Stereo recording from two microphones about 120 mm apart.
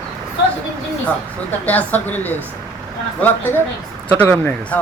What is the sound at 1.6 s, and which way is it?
Speech, 15° left (ahead or behind).